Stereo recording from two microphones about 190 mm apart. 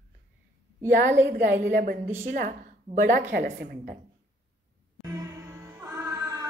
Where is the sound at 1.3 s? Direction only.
55° right (ahead or behind).